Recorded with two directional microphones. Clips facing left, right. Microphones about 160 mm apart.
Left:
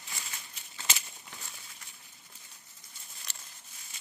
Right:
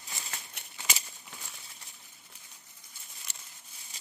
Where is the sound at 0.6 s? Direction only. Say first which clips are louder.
Right 3 dB; 65° right (ahead or behind).